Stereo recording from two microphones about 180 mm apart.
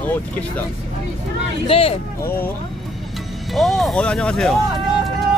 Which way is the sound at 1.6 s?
30° left (ahead or behind).